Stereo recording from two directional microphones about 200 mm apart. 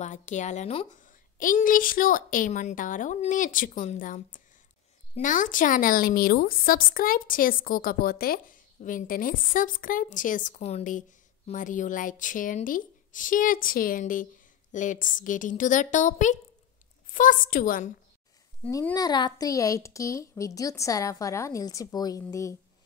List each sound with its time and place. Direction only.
0.0 s a woman's voice: 40° left (ahead or behind)
18.6 s a woman's voice: 10° left (ahead or behind)